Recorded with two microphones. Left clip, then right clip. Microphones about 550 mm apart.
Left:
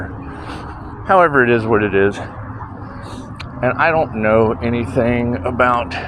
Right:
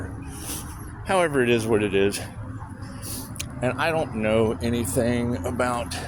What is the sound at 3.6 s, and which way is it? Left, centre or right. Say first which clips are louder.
Speech: left 9 dB; right.